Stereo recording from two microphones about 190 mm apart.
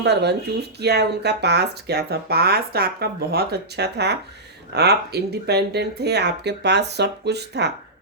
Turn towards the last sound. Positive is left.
turn(degrees=-60)  # may be behind; listen again after turning